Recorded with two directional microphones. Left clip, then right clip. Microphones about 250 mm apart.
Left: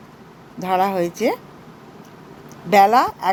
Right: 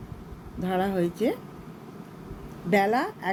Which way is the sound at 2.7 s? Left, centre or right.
Centre.